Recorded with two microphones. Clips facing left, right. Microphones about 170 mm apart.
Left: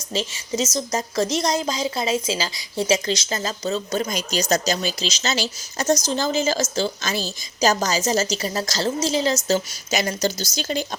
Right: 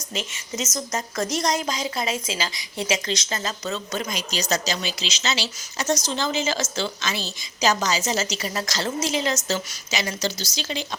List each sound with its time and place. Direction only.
0.1 s a woman's voice: 30° left (ahead or behind)
9.9 s speech: 45° left (ahead or behind)